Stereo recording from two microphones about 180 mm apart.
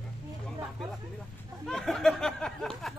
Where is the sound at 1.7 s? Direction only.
5° left (ahead or behind).